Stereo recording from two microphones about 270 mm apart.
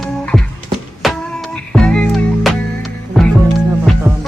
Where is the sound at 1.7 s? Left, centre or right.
Centre.